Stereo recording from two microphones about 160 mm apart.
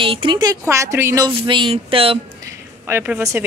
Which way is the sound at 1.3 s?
30° right (ahead or behind).